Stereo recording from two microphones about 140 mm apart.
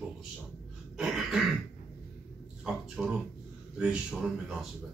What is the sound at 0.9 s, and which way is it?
Cough, 5° right (ahead or behind).